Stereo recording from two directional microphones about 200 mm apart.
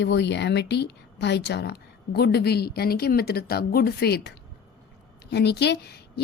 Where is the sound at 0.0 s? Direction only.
60° left (ahead or behind).